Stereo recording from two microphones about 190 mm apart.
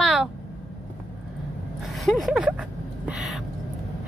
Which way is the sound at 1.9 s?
Centre (ahead or behind).